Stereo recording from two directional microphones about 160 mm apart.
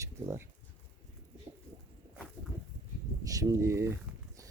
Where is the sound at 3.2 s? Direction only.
20° right (ahead or behind).